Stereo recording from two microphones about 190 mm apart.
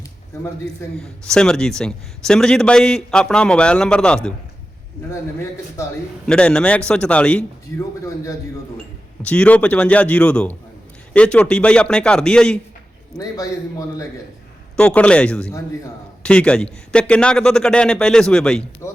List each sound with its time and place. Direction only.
0.8 s a man's voice: 15° left (ahead or behind)
6.2 s a man's voice: 5° left (ahead or behind)
13.1 s a man's voice: 20° left (ahead or behind)
14.8 s a man's voice: 5° left (ahead or behind)
18.8 s music: 15° left (ahead or behind)